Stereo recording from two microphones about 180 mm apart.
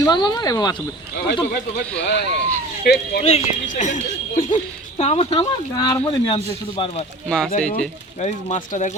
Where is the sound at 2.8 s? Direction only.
60° left (ahead or behind).